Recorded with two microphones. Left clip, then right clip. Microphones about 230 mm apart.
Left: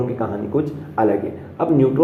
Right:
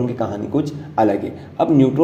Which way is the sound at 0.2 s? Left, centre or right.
Right.